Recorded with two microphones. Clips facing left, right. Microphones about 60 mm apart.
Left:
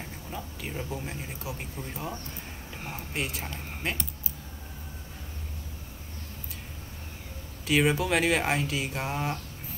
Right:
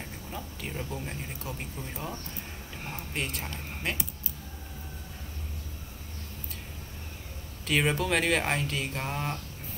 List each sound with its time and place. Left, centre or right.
0.3 s speech: centre
7.6 s speech: centre